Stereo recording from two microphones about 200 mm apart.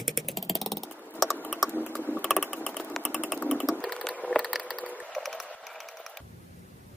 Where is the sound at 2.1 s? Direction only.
Centre (ahead or behind).